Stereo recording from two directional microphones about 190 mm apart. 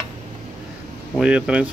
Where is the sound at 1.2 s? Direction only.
5° right (ahead or behind).